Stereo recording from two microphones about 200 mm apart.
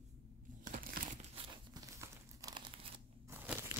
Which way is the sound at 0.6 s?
45° right (ahead or behind).